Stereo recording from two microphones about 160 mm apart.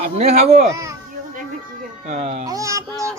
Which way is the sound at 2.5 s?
20° right (ahead or behind).